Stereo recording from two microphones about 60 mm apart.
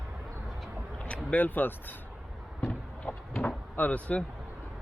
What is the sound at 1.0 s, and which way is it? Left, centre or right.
Speech, left.